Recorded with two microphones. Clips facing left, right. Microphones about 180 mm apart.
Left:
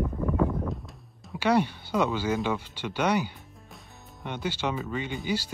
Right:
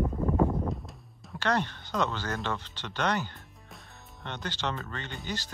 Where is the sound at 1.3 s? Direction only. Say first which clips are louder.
Left 5 dB; 10° left (ahead or behind).